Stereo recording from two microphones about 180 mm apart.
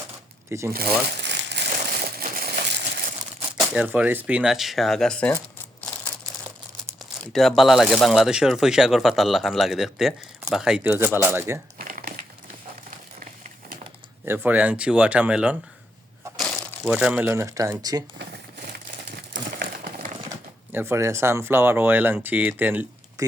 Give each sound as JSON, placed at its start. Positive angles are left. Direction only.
{"t": 0.7, "sound": "speech", "side_deg": -55}
{"t": 1.0, "sound": "crumpling", "side_deg": -75}
{"t": 3.7, "sound": "speech", "side_deg": -5}
{"t": 5.8, "sound": "a sound", "side_deg": 5}
{"t": 7.2, "sound": "speech", "side_deg": 0}
{"t": 11.8, "sound": "crumpling", "side_deg": -55}
{"t": 14.3, "sound": "speech", "side_deg": -10}
{"t": 16.8, "sound": "speech", "side_deg": -5}
{"t": 20.7, "sound": "speech", "side_deg": -15}